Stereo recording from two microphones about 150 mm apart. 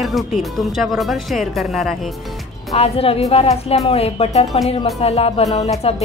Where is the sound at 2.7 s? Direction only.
40° left (ahead or behind).